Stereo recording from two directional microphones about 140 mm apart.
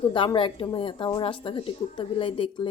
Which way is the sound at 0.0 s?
40° left (ahead or behind).